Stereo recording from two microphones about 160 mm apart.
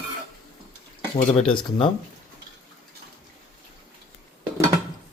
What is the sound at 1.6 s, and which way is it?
Speech, 30° left (ahead or behind).